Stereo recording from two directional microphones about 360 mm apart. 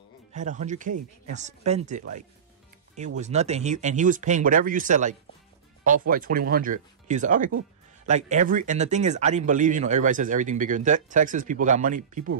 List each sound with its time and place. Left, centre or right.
0.3 s speech: centre
3.2 s speech: centre